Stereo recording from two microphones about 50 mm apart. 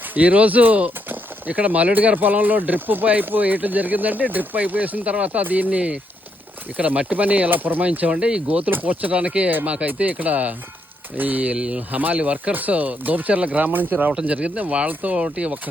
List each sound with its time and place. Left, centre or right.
0.1 s speech: right
7.5 s speech: right
8.1 s speech: centre
8.4 s speech: right
9.5 s speech: right
11.5 s speech: centre
11.8 s speech: right
14.1 s speech: right